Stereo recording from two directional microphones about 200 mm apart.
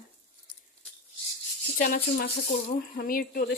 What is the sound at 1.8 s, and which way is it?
Speech, 45° left (ahead or behind).